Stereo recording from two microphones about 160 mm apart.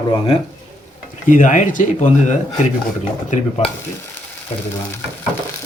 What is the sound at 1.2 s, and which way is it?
Speech, 55° left (ahead or behind).